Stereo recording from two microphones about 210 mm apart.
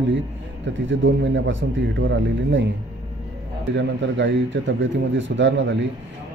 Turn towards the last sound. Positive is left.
turn(degrees=-60)  # may be behind; listen again after turning